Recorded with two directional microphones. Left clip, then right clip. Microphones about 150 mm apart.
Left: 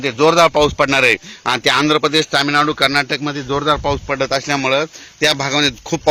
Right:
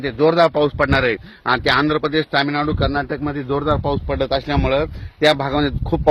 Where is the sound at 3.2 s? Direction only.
5° left (ahead or behind).